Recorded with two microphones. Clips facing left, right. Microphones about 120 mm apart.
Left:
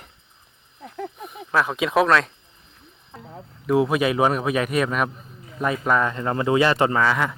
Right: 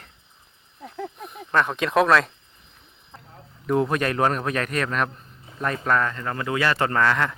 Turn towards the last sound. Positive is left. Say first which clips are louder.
# left 1 dB
turn(degrees=5)  # may be behind; listen again after turning